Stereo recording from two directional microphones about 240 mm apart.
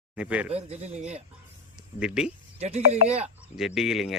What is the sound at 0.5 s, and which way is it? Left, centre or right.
Speech, right.